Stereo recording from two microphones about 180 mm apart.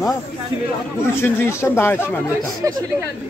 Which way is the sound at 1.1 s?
15° left (ahead or behind).